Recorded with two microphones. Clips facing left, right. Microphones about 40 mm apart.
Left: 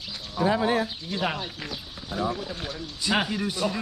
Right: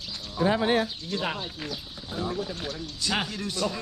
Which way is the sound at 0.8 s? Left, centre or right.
Centre.